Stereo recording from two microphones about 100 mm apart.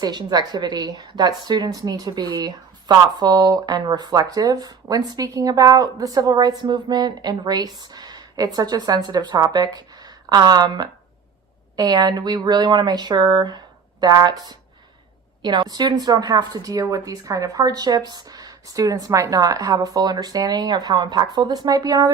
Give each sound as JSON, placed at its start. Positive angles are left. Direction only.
{"t": 0.0, "sound": "a woman's voice", "side_deg": -45}